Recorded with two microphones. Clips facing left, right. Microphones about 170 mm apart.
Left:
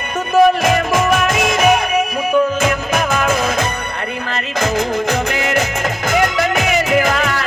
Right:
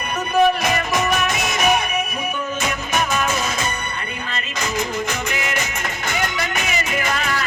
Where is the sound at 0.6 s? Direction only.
50° left (ahead or behind).